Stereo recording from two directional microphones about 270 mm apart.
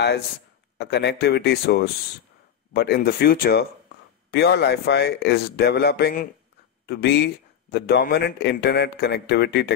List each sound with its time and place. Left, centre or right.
0.7 s speech: left